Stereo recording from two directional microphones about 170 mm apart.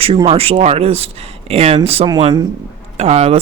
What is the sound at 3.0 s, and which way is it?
Speech, 40° right (ahead or behind).